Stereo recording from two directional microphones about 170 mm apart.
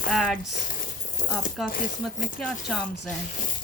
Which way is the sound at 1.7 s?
50° left (ahead or behind).